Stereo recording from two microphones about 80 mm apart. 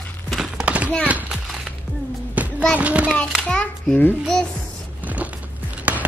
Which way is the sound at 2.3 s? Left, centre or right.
Centre.